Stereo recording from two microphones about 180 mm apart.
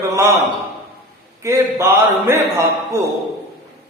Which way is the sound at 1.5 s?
15° right (ahead or behind).